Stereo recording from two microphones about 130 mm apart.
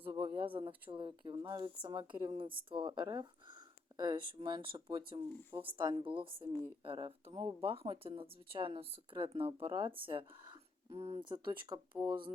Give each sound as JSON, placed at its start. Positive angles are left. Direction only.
{"t": 0.1, "sound": "a sound", "side_deg": -35}
{"t": 0.9, "sound": "speech", "side_deg": -40}
{"t": 11.2, "sound": "speech", "side_deg": -35}